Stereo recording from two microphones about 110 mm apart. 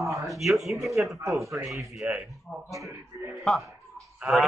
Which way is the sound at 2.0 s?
15° right (ahead or behind).